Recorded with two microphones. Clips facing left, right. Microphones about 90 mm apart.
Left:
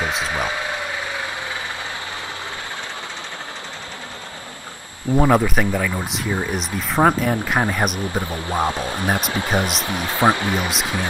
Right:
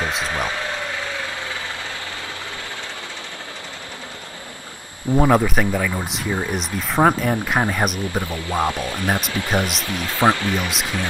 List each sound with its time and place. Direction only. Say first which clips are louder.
0.0 s a sound: left 1 dB; centre (ahead or behind)
0.3 s speech: left 1 dB; 15° left (ahead or behind)
5.1 s speech: even; centre (ahead or behind)
8.1 s speech: even; 20° left (ahead or behind)